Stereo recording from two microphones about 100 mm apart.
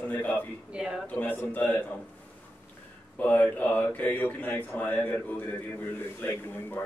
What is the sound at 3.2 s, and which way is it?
A man's voice, 15° left (ahead or behind).